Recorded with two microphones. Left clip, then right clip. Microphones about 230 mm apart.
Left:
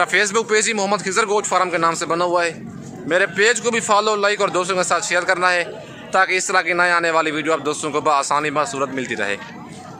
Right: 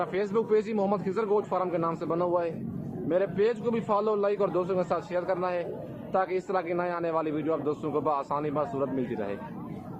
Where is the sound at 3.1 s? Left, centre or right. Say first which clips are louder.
Left 10 dB; centre.